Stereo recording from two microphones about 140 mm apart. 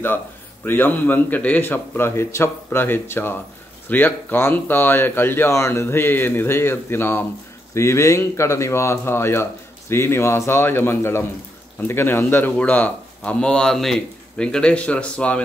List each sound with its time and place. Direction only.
0.7 s speech: 15° left (ahead or behind)